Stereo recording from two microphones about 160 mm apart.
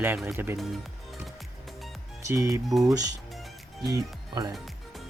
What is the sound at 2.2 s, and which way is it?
Speech, 20° right (ahead or behind).